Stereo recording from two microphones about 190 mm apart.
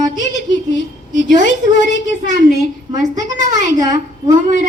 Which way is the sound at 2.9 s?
40° right (ahead or behind).